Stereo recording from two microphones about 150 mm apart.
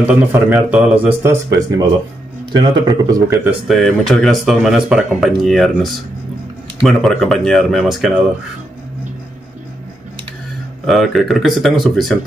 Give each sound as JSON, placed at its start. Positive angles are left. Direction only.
{"t": 0.0, "sound": "a man's voice", "side_deg": -10}
{"t": 3.6, "sound": "speech", "side_deg": 0}
{"t": 10.9, "sound": "speech", "side_deg": 0}